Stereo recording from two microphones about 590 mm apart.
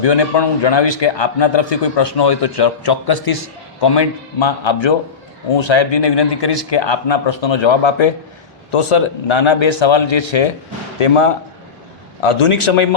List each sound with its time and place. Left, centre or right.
0.0 s a man's voice: left
12.2 s a man's voice: left